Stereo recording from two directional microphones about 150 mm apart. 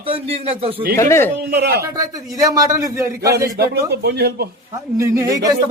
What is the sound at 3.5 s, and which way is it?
Speech, 90° right.